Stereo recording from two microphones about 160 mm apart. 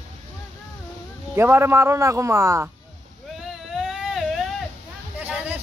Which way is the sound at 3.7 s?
Centre (ahead or behind).